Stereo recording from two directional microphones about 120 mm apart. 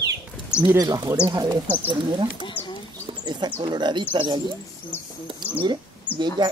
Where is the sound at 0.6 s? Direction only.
30° right (ahead or behind).